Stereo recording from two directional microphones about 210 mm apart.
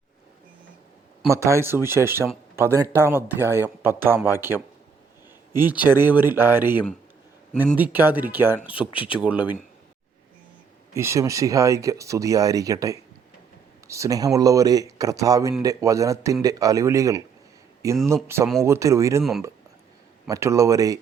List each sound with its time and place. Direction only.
1.3 s speech: 15° right (ahead or behind)
5.8 s speech: 10° right (ahead or behind)
10.9 s speech: 15° right (ahead or behind)
20.2 s speech: 15° right (ahead or behind)